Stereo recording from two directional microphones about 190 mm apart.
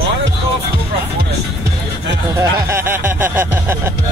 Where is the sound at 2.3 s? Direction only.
15° right (ahead or behind).